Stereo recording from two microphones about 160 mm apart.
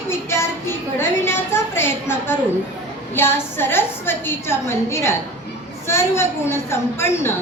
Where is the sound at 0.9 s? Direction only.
15° left (ahead or behind).